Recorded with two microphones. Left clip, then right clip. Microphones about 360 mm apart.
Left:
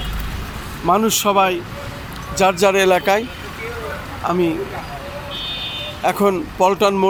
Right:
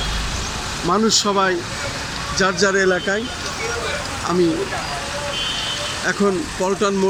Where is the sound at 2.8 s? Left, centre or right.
Left.